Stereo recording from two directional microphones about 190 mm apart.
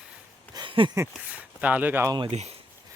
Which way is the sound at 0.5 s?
25° right (ahead or behind).